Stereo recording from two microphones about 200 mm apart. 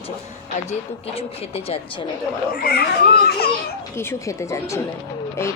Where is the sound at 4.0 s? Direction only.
15° left (ahead or behind).